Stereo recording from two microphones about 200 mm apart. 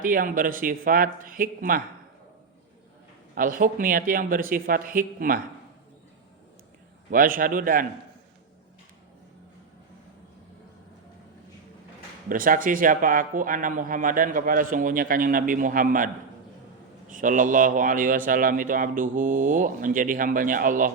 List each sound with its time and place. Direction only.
0.0 s a man's voice: 45° right (ahead or behind)
3.3 s a man's voice: 45° right (ahead or behind)
7.1 s a man's voice: 45° right (ahead or behind)
12.3 s a man's voice: 45° right (ahead or behind)
17.1 s a man's voice: 40° right (ahead or behind)